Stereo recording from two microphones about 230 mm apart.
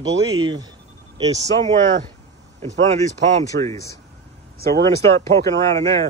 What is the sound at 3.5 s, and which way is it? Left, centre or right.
Speech, right.